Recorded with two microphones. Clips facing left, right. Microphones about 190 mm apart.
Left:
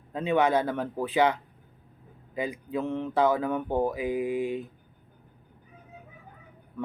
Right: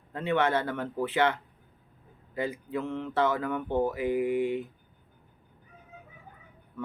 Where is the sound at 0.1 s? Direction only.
15° left (ahead or behind).